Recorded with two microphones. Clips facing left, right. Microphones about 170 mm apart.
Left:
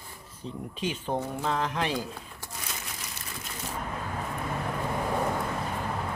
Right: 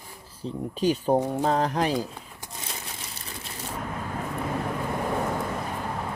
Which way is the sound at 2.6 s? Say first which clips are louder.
Right 2 dB; 30° right (ahead or behind).